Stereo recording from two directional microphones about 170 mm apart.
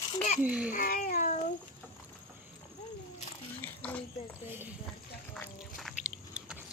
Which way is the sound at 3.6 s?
10° left (ahead or behind).